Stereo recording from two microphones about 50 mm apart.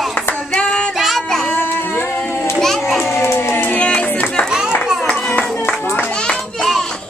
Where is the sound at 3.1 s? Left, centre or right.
Left.